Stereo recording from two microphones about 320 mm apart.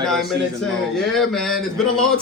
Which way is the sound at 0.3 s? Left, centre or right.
Centre.